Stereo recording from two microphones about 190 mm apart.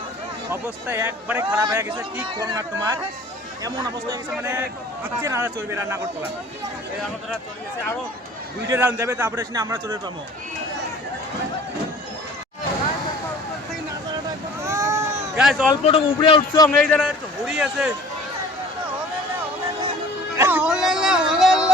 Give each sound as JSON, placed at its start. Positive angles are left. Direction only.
{"t": 0.5, "sound": "speech", "side_deg": -10}
{"t": 4.3, "sound": "speech", "side_deg": -10}
{"t": 8.7, "sound": "speech", "side_deg": -10}
{"t": 14.6, "sound": "vehicle", "side_deg": -15}
{"t": 15.4, "sound": "speech", "side_deg": -5}
{"t": 15.7, "sound": "a man's voice", "side_deg": 30}
{"t": 16.6, "sound": "a man's voice", "side_deg": 5}
{"t": 20.3, "sound": "a sound", "side_deg": -10}